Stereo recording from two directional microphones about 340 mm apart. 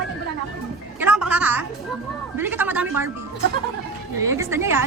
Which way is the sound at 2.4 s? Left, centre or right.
Centre.